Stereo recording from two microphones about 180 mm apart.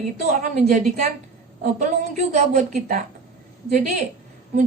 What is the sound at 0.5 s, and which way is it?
Speech, 40° right (ahead or behind).